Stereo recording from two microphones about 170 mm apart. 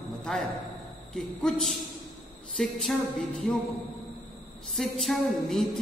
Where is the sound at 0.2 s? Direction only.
Centre (ahead or behind).